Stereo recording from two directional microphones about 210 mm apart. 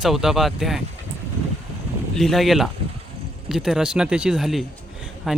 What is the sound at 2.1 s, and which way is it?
Speech, centre (ahead or behind).